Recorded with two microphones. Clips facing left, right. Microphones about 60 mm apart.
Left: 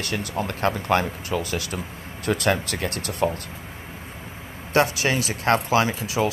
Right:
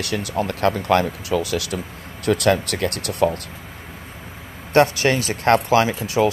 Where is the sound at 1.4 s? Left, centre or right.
Left.